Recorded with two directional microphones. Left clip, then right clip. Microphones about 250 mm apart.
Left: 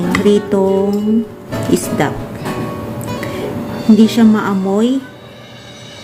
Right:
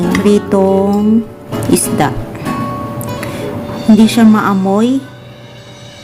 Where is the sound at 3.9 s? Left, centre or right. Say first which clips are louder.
Right 2 dB; centre.